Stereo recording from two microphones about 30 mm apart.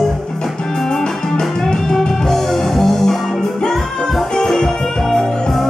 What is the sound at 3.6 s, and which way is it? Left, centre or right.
Music, left.